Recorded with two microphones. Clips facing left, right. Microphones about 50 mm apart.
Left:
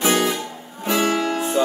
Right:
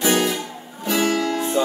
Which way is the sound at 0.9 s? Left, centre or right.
Left.